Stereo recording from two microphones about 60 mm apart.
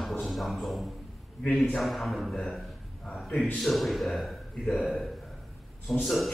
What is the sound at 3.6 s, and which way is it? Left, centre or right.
A man's voice, centre.